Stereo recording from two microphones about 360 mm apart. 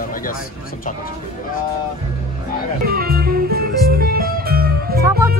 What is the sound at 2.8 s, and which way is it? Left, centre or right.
Music, right.